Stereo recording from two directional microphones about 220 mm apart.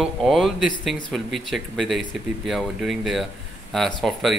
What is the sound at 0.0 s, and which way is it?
Speech, centre (ahead or behind).